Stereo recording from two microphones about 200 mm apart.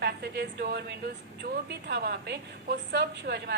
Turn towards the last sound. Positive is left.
turn(degrees=-55)  # may be behind; listen again after turning